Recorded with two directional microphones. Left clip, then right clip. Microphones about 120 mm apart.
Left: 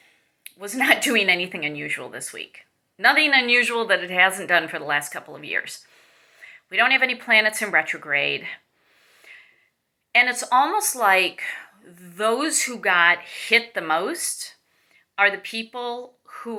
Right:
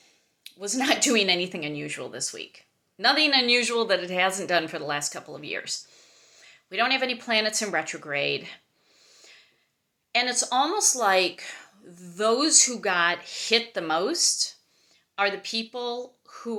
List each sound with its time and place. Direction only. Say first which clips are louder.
0.4 s a woman's voice: left 5 dB; 45° right (ahead or behind)
9.2 s a sound: left 7 dB; 45° right (ahead or behind)
10.4 s a woman's voice: left 4 dB; 45° right (ahead or behind)
11.9 s speech: even; 20° right (ahead or behind)
12.4 s a woman's voice: right 2 dB; 45° right (ahead or behind)